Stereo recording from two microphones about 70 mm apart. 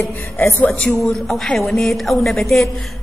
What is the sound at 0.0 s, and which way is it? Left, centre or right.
Speech, left.